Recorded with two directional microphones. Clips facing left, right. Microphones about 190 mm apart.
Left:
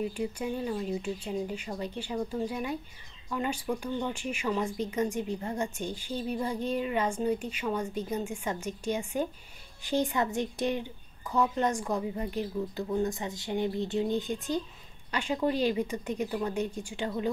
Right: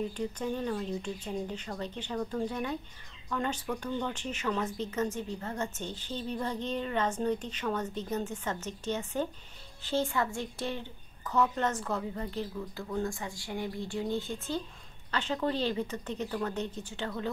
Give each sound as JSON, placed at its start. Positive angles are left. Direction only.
{"t": 0.1, "sound": "speech", "side_deg": 10}